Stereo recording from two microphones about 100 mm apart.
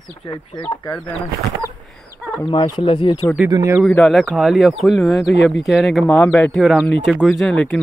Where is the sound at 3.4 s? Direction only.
35° right (ahead or behind).